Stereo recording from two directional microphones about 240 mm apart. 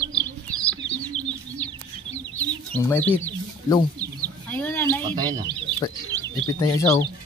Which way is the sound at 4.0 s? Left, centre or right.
Centre.